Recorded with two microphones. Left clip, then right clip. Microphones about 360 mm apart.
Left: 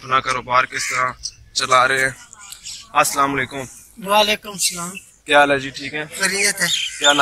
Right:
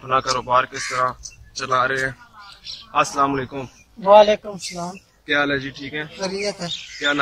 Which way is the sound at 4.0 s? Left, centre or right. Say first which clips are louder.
Right 5 dB; right.